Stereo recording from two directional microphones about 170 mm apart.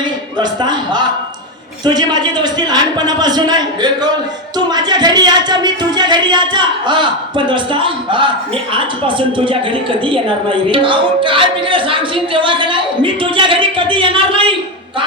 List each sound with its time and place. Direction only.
0.0 s a woman's voice: 25° right (ahead or behind)